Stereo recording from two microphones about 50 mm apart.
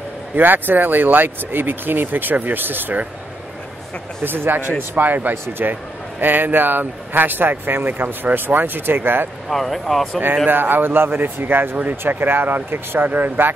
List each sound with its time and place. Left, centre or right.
0.4 s speech: right
4.2 s speech: right
9.5 s speech: centre
10.3 s speech: right